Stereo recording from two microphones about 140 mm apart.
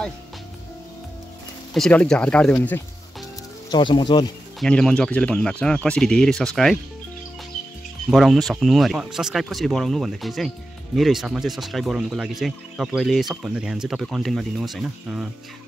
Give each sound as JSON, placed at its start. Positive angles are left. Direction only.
{"t": 1.7, "sound": "speech", "side_deg": 5}
{"t": 3.7, "sound": "speech", "side_deg": 35}
{"t": 4.6, "sound": "speech", "side_deg": 5}
{"t": 8.1, "sound": "speech", "side_deg": 0}